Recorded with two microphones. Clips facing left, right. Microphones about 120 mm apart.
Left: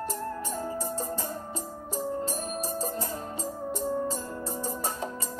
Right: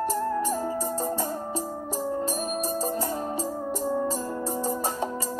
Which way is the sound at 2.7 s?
35° right (ahead or behind).